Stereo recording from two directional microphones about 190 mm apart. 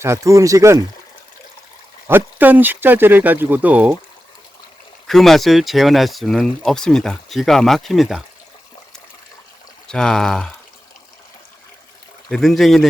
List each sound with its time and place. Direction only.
0.0 s speech: 15° right (ahead or behind)
2.0 s speech: 10° right (ahead or behind)
5.0 s speech: centre (ahead or behind)
9.8 s speech: 5° left (ahead or behind)
12.3 s speech: centre (ahead or behind)